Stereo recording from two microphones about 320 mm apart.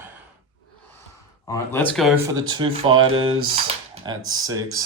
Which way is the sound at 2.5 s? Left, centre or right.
Centre.